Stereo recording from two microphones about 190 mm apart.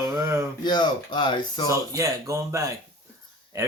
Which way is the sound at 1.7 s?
15° right (ahead or behind).